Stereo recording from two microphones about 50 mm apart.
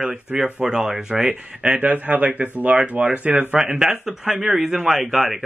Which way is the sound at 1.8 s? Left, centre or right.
Right.